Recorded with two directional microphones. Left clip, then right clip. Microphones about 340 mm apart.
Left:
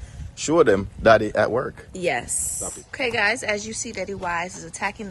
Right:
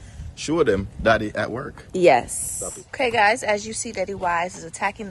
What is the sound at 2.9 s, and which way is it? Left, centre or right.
A man's voice, centre.